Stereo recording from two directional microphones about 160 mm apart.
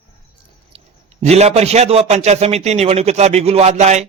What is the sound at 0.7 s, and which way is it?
A man's voice, 45° right (ahead or behind).